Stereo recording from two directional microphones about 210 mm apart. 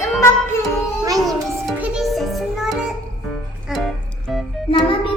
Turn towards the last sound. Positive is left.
turn(degrees=25)  # may be behind; listen again after turning